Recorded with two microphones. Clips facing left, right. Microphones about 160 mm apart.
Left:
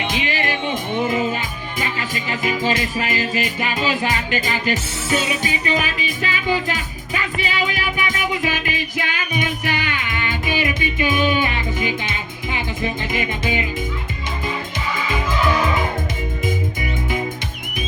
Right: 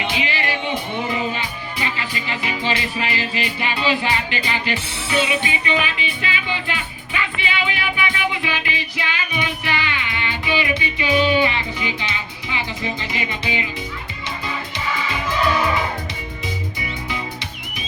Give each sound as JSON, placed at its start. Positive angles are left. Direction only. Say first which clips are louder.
{"t": 0.1, "sound": "music", "louder": "left 1 dB", "side_deg": 45}
{"t": 16.5, "sound": "music", "louder": "left 4 dB", "side_deg": 50}